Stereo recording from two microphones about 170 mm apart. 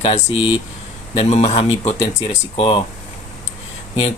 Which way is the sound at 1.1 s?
40° left (ahead or behind).